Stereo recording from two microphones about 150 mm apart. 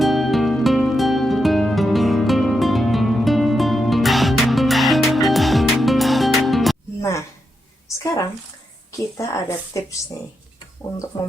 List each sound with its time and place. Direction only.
0.0 s music: centre (ahead or behind)
7.0 s a sound: 20° left (ahead or behind)
8.9 s a woman's voice: 20° left (ahead or behind)